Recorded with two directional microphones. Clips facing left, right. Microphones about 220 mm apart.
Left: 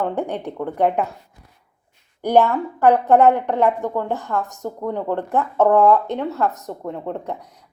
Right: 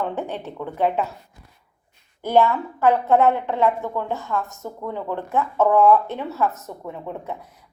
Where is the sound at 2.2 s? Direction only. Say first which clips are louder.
Left 2 dB; 15° left (ahead or behind).